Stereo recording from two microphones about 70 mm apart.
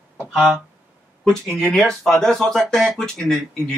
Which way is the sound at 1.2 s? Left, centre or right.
Centre.